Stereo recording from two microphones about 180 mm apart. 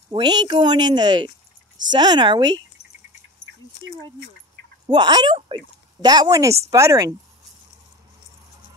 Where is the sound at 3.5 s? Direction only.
90° right.